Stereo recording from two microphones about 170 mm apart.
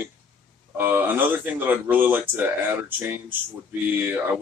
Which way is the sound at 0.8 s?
10° right (ahead or behind).